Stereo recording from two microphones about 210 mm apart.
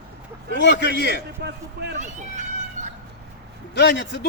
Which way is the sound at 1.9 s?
35° right (ahead or behind).